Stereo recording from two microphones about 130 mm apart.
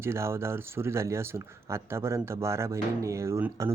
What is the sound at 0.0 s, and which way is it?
Speech, 20° right (ahead or behind).